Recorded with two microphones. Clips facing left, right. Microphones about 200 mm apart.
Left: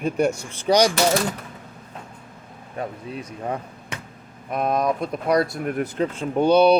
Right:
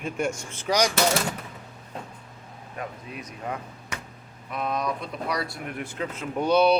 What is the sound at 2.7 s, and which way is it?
Speech, 30° left (ahead or behind).